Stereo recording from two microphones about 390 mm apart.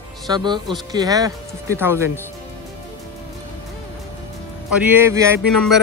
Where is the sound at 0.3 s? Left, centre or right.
Centre.